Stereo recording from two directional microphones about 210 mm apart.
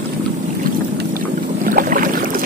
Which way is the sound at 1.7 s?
40° right (ahead or behind).